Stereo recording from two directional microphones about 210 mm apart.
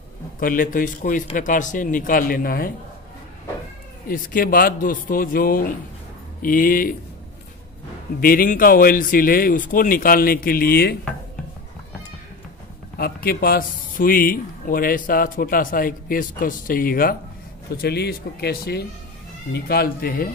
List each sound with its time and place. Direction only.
0.4 s a man's voice: 40° left (ahead or behind)
4.1 s a man's voice: 40° left (ahead or behind)
8.2 s a man's voice: 45° left (ahead or behind)
12.9 s a man's voice: 45° left (ahead or behind)